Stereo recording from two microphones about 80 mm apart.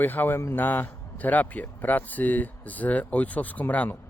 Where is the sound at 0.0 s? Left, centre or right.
Left.